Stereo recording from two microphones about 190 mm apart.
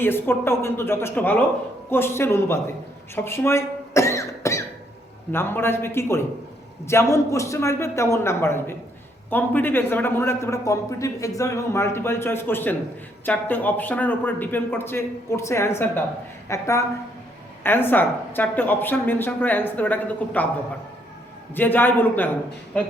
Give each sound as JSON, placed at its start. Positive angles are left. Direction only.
{"t": 0.0, "sound": "a man's voice", "side_deg": 10}
{"t": 3.2, "sound": "cough", "side_deg": 15}
{"t": 5.3, "sound": "a man's voice", "side_deg": 10}
{"t": 21.5, "sound": "a man's voice", "side_deg": 10}